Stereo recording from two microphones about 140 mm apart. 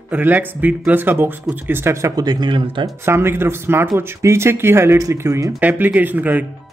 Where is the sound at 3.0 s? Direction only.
15° right (ahead or behind).